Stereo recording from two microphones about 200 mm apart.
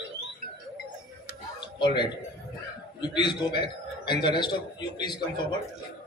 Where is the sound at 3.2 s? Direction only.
20° left (ahead or behind).